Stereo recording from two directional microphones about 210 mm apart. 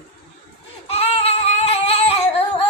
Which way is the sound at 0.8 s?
30° left (ahead or behind).